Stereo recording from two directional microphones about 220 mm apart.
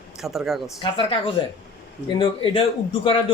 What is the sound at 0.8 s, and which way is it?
A man's voice, 20° left (ahead or behind).